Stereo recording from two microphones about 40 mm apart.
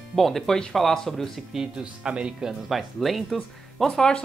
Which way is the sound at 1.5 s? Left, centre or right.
Right.